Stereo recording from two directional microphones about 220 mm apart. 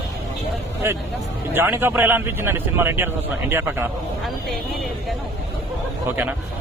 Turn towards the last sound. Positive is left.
turn(degrees=-10)  # may be behind; listen again after turning